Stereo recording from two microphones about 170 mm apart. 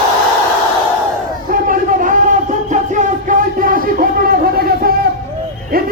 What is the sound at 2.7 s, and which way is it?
Music, 45° right (ahead or behind).